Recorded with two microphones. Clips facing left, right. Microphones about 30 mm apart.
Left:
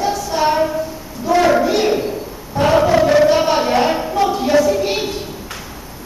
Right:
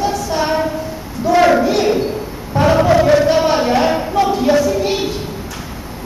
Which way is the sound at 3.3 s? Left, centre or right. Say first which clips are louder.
Right 1 dB; centre.